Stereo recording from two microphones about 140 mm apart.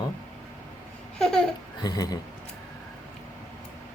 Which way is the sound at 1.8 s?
30° left (ahead or behind).